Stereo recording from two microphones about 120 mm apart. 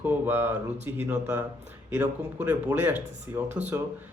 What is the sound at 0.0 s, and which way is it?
A man's voice, 15° right (ahead or behind).